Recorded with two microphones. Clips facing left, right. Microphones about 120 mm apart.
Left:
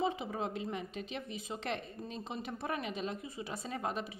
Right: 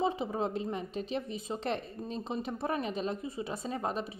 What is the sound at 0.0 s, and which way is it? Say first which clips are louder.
A woman's voice: right 4 dB; 30° right (ahead or behind).